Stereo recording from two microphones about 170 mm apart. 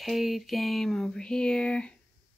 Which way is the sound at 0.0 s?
Centre (ahead or behind).